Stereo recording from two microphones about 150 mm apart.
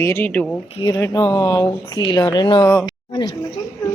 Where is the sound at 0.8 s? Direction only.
20° left (ahead or behind).